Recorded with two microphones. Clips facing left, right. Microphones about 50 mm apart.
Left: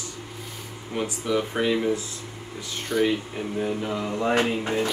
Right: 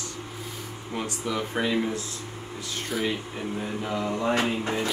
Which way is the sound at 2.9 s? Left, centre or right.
Centre.